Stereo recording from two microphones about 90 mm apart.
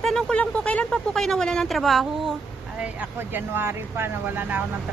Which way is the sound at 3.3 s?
25° right (ahead or behind).